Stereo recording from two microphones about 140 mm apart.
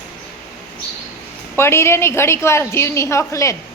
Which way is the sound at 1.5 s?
20° left (ahead or behind).